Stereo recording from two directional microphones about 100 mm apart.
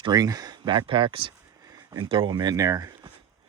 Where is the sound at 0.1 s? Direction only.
40° right (ahead or behind).